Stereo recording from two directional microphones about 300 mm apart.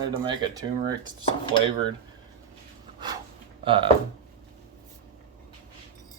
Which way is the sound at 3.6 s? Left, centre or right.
Centre.